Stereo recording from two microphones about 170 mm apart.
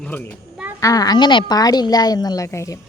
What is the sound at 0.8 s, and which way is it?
A woman's voice, 20° left (ahead or behind).